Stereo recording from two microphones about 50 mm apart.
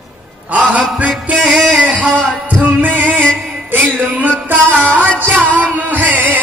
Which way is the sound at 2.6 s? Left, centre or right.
Right.